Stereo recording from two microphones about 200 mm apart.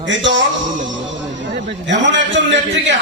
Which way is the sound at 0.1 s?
65° right (ahead or behind).